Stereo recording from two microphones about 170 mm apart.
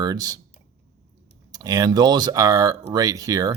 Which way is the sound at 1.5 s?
20° right (ahead or behind).